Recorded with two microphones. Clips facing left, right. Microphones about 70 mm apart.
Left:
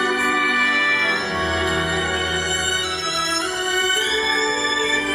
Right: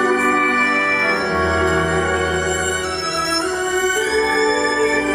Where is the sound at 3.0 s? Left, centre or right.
Right.